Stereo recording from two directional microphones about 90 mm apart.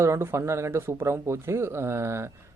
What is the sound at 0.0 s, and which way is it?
Speech, 30° right (ahead or behind).